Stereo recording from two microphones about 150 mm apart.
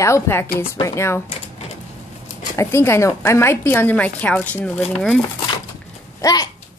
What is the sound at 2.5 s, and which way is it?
A woman's voice, 15° left (ahead or behind).